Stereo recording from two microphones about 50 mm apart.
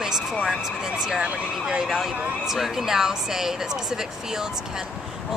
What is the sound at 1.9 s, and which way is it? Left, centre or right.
Speech, centre.